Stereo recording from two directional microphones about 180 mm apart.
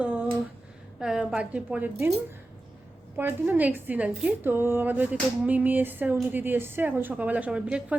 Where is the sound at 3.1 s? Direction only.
10° right (ahead or behind).